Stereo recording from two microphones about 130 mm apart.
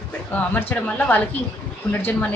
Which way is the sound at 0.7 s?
15° left (ahead or behind).